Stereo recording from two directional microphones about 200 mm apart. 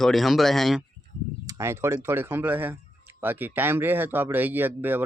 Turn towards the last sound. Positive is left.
turn(degrees=-10)  # may be behind; listen again after turning